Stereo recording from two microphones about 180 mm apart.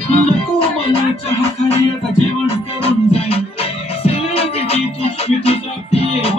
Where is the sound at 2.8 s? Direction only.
35° left (ahead or behind).